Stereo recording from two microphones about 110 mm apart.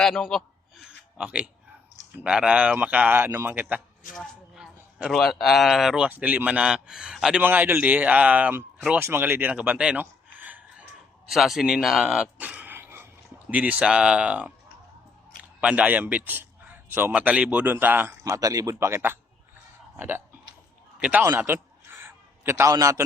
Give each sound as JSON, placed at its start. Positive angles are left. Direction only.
{"t": 0.0, "sound": "a man's voice", "side_deg": 5}
{"t": 0.9, "sound": "a sound", "side_deg": -10}
{"t": 2.1, "sound": "speech", "side_deg": -10}
{"t": 4.1, "sound": "a sound", "side_deg": 0}
{"t": 5.1, "sound": "speech", "side_deg": 0}
{"t": 6.1, "sound": "speech", "side_deg": -15}
{"t": 7.4, "sound": "speech", "side_deg": -20}
{"t": 11.3, "sound": "speech", "side_deg": 0}
{"t": 11.9, "sound": "a sound", "side_deg": -10}
{"t": 13.5, "sound": "speech", "side_deg": -15}
{"t": 15.6, "sound": "a man's voice", "side_deg": -15}
{"t": 18.2, "sound": "speech", "side_deg": -30}
{"t": 21.0, "sound": "a sound", "side_deg": -15}
{"t": 22.7, "sound": "a man's voice", "side_deg": -30}